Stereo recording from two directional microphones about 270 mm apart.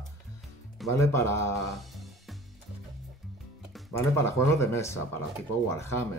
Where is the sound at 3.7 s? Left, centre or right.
Centre.